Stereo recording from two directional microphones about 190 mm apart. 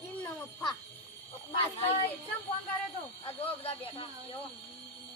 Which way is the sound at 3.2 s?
30° left (ahead or behind).